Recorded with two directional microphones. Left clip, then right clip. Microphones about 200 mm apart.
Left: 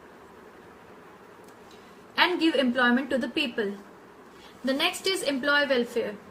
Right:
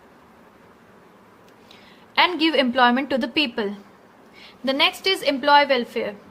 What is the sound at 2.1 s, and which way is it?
A woman's voice, 45° right (ahead or behind).